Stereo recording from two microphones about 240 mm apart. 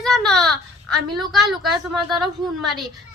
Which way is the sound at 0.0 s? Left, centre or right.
Centre.